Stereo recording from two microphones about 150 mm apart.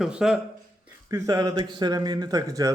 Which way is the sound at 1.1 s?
25° right (ahead or behind).